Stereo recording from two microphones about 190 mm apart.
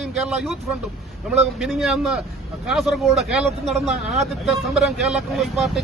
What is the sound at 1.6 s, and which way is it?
Speech, centre (ahead or behind).